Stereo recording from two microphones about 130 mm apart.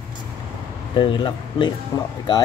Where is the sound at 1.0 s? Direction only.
40° left (ahead or behind).